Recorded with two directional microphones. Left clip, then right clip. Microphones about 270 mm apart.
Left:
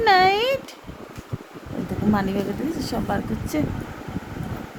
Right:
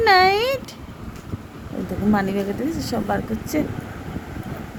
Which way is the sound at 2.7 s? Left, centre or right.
Centre.